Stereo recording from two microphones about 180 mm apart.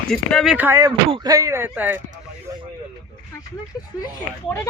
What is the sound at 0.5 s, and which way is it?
Speech, 15° right (ahead or behind).